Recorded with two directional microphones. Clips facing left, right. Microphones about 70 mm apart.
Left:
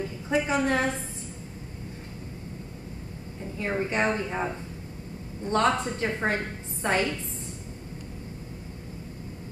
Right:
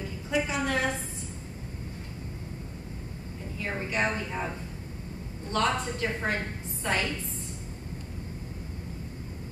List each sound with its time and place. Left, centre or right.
0.3 s a woman's voice: left
3.5 s a woman's voice: left
5.5 s a woman's voice: left